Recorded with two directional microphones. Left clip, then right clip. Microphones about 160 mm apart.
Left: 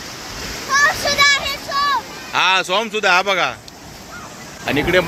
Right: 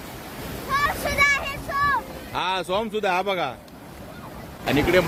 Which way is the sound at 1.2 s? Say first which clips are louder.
Left 4 dB; 20° left (ahead or behind).